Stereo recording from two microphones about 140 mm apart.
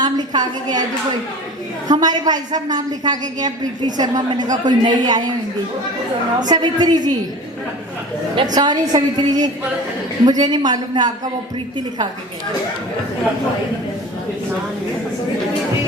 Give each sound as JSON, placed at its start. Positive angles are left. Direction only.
{"t": 0.0, "sound": "a woman's voice", "side_deg": -30}
{"t": 1.9, "sound": "a woman's voice", "side_deg": -30}
{"t": 6.4, "sound": "a woman's voice", "side_deg": -30}
{"t": 8.5, "sound": "a woman's voice", "side_deg": -30}